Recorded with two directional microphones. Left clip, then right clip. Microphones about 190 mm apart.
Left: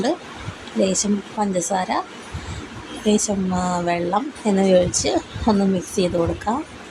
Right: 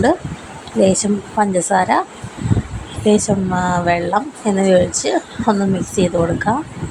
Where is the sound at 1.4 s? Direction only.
25° right (ahead or behind).